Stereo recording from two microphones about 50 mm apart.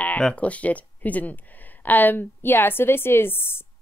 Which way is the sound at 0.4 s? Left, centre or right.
Left.